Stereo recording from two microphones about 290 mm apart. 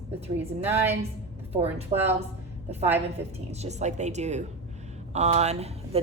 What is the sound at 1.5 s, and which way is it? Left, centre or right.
Speech, right.